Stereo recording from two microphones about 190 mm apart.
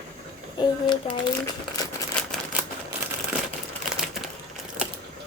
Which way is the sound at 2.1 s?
5° left (ahead or behind).